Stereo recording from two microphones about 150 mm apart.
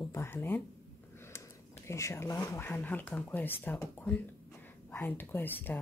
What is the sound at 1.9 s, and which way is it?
A woman's voice, 20° left (ahead or behind).